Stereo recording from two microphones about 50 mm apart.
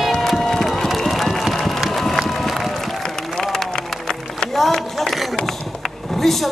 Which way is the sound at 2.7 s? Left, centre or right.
Centre.